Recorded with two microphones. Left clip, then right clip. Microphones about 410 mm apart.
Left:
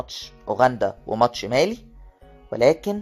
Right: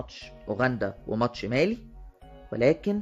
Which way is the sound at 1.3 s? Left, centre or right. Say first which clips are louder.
Left 5 dB; centre.